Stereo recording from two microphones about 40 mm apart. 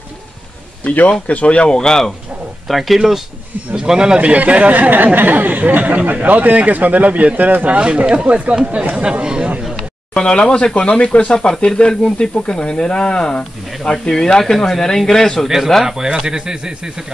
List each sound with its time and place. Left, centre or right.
1.2 s speech: left; by 2.1 s centre
2.7 s speech: centre
3.7 s speech: right
4.2 s a man's voice: right
7.7 s a man's voice: right
9.2 s speech: right
10.1 s speech: left
13.4 s speech: centre
13.9 s speech: centre
15.4 s speech: centre